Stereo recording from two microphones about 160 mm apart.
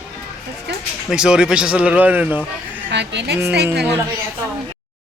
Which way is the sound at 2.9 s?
90° right.